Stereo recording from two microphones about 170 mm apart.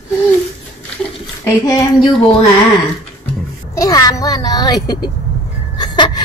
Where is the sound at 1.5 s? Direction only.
15° left (ahead or behind).